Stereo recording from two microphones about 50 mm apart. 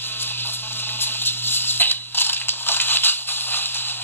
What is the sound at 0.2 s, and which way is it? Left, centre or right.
Music, left.